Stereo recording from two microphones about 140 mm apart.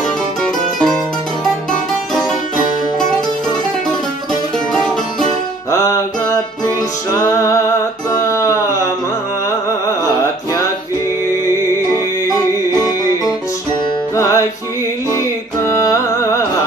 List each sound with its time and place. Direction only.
0.4 s music: 5° left (ahead or behind)
5.7 s music: 20° left (ahead or behind)
14.1 s music: 20° left (ahead or behind)